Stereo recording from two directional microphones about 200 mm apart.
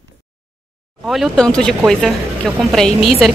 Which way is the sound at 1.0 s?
Centre (ahead or behind).